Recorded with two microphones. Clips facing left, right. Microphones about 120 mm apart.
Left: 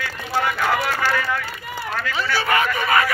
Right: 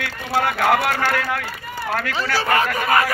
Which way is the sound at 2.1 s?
40° right (ahead or behind).